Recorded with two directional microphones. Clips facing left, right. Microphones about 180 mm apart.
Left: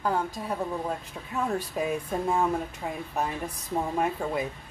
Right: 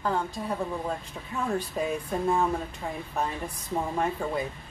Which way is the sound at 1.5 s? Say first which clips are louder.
Even; 10° left (ahead or behind).